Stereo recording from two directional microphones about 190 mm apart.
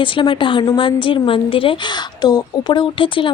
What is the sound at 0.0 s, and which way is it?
A woman's voice, 25° left (ahead or behind).